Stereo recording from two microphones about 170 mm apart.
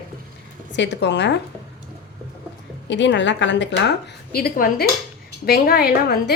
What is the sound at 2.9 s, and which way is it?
Speech, 90° left.